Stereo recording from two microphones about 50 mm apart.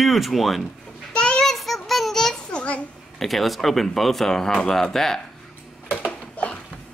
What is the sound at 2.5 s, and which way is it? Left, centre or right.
Babbling, left.